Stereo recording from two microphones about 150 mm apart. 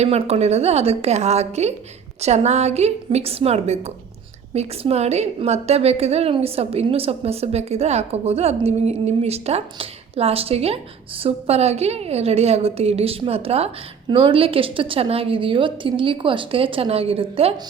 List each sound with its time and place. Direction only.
0.0 s a woman's voice: 45° right (ahead or behind)